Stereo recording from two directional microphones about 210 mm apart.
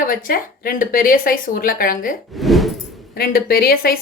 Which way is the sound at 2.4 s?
Centre (ahead or behind).